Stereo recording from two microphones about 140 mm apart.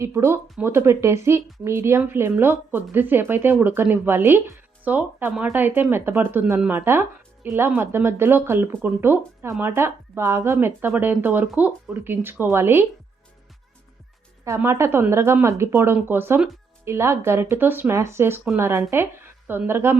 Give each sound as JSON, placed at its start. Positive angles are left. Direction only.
{"t": 0.0, "sound": "a woman's voice", "side_deg": -20}
{"t": 5.5, "sound": "speech", "side_deg": -15}
{"t": 14.4, "sound": "speech", "side_deg": -20}